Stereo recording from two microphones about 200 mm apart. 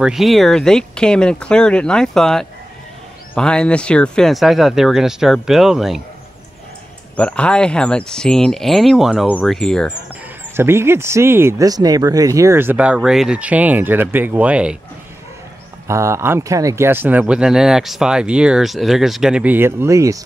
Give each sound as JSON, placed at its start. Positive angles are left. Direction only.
{"t": 0.0, "sound": "speech", "side_deg": 0}
{"t": 7.2, "sound": "speech", "side_deg": 5}
{"t": 10.5, "sound": "speech", "side_deg": -10}
{"t": 15.9, "sound": "speech", "side_deg": -15}